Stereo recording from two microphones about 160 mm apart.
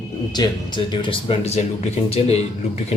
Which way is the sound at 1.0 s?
35° left (ahead or behind).